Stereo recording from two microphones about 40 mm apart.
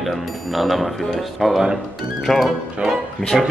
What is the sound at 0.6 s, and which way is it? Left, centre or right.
Speech, centre.